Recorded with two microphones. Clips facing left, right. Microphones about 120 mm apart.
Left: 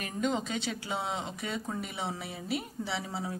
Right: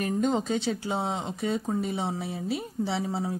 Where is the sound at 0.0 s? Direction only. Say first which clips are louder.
Right 6 dB; 40° right (ahead or behind).